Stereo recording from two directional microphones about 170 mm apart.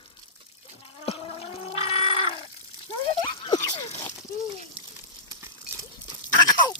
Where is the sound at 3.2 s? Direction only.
25° left (ahead or behind).